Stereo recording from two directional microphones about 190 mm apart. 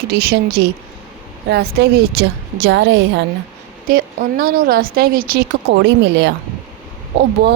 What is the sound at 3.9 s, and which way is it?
Speech, 50° right (ahead or behind).